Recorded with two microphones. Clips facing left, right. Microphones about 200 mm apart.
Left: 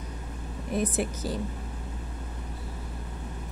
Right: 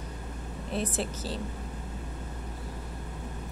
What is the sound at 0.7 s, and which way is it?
Speech, 15° left (ahead or behind).